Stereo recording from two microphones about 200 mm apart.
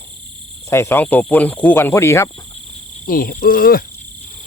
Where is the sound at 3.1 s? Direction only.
45° left (ahead or behind).